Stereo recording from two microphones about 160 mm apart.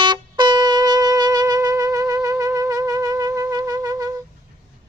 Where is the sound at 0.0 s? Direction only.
30° right (ahead or behind).